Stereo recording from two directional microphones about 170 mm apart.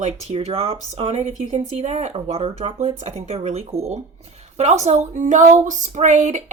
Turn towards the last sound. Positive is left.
turn(degrees=-45)  # may be behind; listen again after turning